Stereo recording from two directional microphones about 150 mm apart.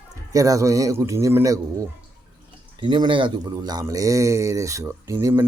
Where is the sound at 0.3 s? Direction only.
20° right (ahead or behind).